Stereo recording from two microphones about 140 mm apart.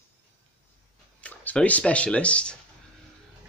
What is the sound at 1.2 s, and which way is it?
Speech, 10° left (ahead or behind).